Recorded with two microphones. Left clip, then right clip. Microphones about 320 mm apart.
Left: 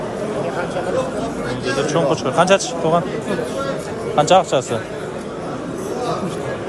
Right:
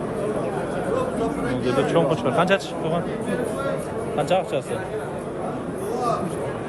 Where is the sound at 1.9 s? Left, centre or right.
Centre.